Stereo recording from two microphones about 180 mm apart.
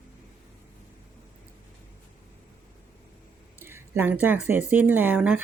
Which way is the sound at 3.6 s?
15° right (ahead or behind).